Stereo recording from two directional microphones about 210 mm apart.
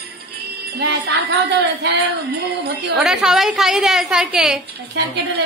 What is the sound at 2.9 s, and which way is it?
A woman's voice, centre (ahead or behind).